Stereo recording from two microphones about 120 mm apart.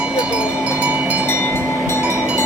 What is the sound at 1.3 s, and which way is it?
Train, 20° left (ahead or behind).